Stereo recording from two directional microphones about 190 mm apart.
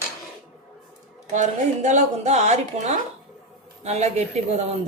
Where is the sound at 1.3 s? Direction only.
40° right (ahead or behind).